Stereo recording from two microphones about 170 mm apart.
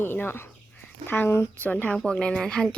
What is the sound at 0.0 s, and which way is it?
Speech, 10° left (ahead or behind).